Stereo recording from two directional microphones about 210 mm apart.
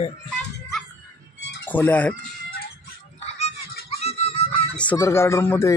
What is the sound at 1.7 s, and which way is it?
Speech, 10° left (ahead or behind).